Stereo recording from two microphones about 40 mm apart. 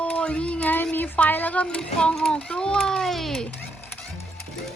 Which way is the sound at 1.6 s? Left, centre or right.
Left.